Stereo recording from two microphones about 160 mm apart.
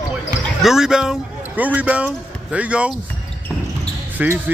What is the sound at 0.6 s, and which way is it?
Speech, 5° right (ahead or behind).